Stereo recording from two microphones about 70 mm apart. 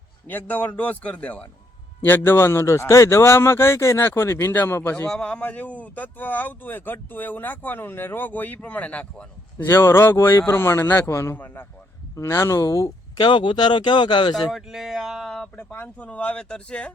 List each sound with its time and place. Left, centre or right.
0.3 s speech: left
2.0 s a man's voice: left
5.0 s speech: centre
9.6 s a man's voice: left
11.3 s speech: left
12.2 s speech: left
13.1 s speech: left
14.3 s speech: centre
15.5 s speech: left